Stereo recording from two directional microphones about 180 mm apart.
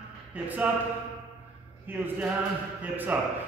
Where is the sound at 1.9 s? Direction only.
10° right (ahead or behind).